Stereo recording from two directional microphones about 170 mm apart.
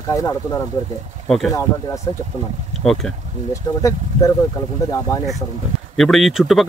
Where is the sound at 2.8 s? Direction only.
Centre (ahead or behind).